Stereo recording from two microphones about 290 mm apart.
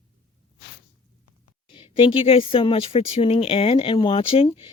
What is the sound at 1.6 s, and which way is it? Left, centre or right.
Speech, centre.